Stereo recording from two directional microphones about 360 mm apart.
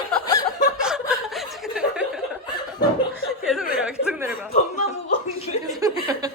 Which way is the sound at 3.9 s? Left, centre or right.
Centre.